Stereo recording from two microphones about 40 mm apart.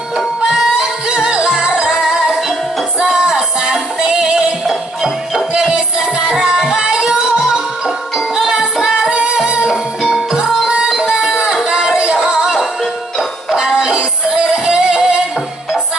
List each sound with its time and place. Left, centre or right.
1.0 s music: right
2.0 s music: centre
4.6 s music: centre
5.5 s music: centre
8.4 s music: centre
9.1 s music: right
9.7 s music: centre
11.5 s a sound: centre
12.2 s music: centre
13.6 s music: centre